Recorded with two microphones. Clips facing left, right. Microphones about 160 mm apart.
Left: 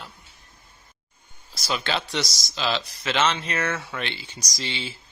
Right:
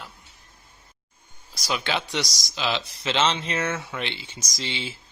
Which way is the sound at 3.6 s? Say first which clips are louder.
Even; 10° right (ahead or behind).